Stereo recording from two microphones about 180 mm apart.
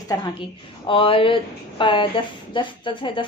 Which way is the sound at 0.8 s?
30° left (ahead or behind).